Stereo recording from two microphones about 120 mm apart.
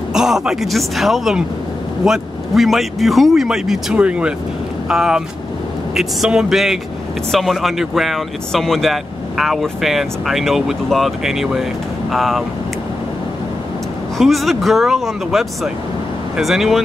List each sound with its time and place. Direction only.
0.1 s speech: 5° right (ahead or behind)
14.1 s speech: centre (ahead or behind)